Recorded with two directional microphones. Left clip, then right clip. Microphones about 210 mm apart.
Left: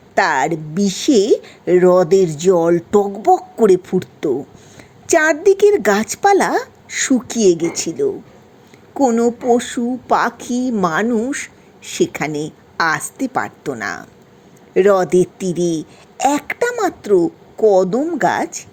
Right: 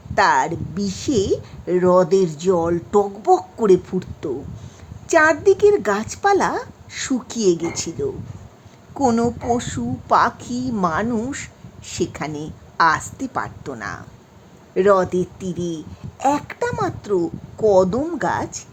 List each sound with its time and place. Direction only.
0.1 s a woman's voice: 15° left (ahead or behind)
9.1 s a woman's voice: 15° left (ahead or behind)